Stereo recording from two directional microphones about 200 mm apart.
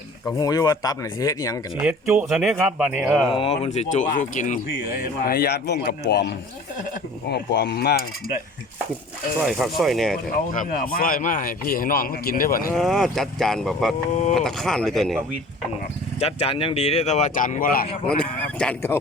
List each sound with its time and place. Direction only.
0.3 s speech: 20° left (ahead or behind)
1.8 s speech: 5° right (ahead or behind)
3.3 s speech: 30° left (ahead or behind); by 8.0 s 55° left (ahead or behind)
9.4 s speech: centre (ahead or behind)
10.3 s speech: 40° left (ahead or behind)
12.7 s speech: centre (ahead or behind)
16.2 s speech: 30° left (ahead or behind); by 17.8 s 45° left (ahead or behind)
18.2 s speech: 5° left (ahead or behind)